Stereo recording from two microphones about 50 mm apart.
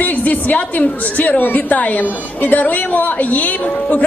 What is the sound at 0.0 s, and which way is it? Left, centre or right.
A man's voice, left.